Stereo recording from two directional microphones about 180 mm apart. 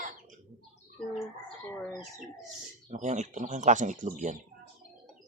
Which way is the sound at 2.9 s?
40° right (ahead or behind).